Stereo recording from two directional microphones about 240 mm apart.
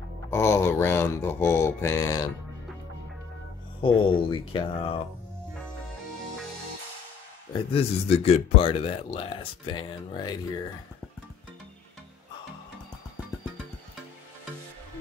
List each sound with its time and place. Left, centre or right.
0.3 s mantra: centre
3.8 s speech: left
7.7 s speech: left